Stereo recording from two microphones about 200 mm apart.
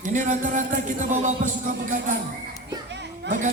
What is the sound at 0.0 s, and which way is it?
Music, 40° right (ahead or behind).